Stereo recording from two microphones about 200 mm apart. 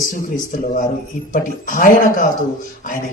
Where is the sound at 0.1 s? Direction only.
40° left (ahead or behind).